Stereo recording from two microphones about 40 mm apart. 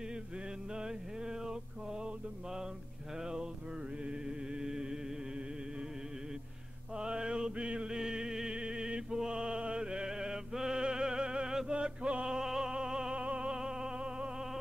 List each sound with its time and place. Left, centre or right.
0.7 s mantra: centre
3.2 s a sound: right
4.0 s music: right
7.0 s mantra: right
8.0 s music: centre
12.4 s music: centre
13.1 s music: right